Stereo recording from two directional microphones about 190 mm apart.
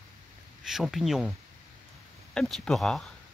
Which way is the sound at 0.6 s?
Centre (ahead or behind).